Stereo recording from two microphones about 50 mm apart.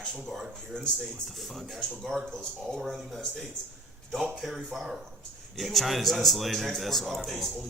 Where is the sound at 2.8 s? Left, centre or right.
Centre.